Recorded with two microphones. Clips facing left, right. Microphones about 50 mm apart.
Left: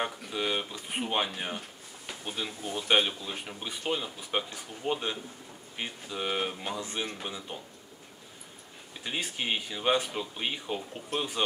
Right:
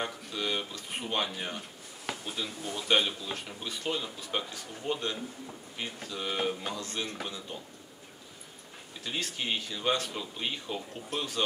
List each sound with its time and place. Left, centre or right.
0.0 s speech: centre
9.0 s speech: centre